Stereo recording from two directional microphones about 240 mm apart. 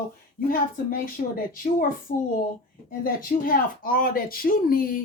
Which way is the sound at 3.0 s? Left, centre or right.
Left.